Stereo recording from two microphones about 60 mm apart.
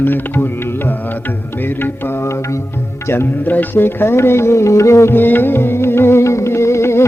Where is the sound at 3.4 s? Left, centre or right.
Left.